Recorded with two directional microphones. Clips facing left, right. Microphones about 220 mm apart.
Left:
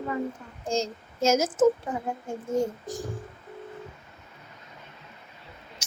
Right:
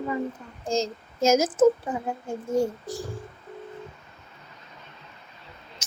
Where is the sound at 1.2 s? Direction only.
10° right (ahead or behind).